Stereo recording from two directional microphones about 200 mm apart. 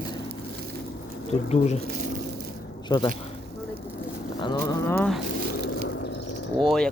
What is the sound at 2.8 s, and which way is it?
Speech, 20° left (ahead or behind).